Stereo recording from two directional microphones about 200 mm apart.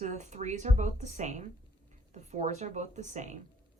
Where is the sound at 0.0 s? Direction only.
35° right (ahead or behind).